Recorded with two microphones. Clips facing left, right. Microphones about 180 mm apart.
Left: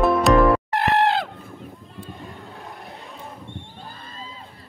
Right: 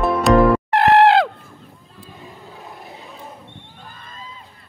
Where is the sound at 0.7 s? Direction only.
90° right.